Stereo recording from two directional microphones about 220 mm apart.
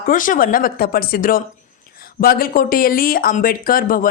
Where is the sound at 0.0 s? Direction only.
40° left (ahead or behind).